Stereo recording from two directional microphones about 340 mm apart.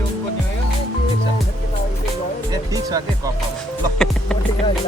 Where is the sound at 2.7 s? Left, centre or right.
Centre.